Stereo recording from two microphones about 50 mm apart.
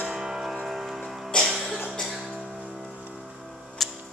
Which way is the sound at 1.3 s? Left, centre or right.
Centre.